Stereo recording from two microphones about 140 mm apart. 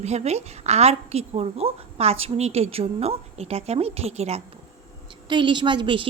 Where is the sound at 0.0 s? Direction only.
50° right (ahead or behind).